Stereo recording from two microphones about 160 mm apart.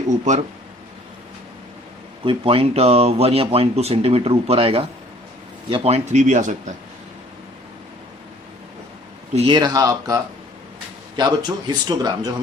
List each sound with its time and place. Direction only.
2.2 s speech: 35° right (ahead or behind); by 6.7 s 50° right (ahead or behind)
9.3 s speech: 40° right (ahead or behind)
9.6 s speech: 25° right (ahead or behind)
11.2 s speech: 25° right (ahead or behind)